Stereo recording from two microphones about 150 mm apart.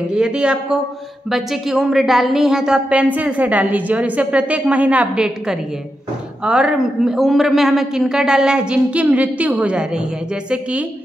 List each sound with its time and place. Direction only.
0.1 s a man's voice: 5° right (ahead or behind)